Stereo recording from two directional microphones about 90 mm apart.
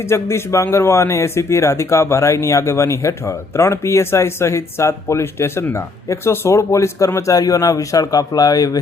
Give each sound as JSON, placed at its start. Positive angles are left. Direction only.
{"t": 0.1, "sound": "a man's voice", "side_deg": 30}